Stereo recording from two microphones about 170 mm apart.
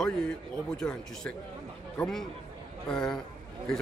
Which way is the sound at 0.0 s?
5° left (ahead or behind).